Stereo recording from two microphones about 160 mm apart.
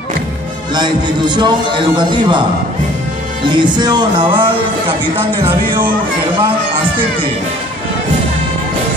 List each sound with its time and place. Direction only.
0.7 s speech: 30° right (ahead or behind)
3.4 s speech: 30° right (ahead or behind)